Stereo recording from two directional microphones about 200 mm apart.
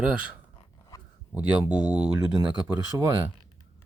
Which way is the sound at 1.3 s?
5° right (ahead or behind).